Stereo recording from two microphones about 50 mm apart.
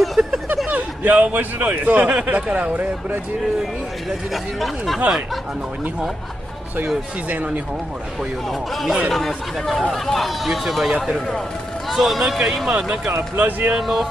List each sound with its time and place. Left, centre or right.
0.0 s a sound: centre
0.7 s a sound: right
1.7 s speech: right
4.3 s speech: centre
9.1 s speech: centre
13.4 s speech: right
13.7 s speech: centre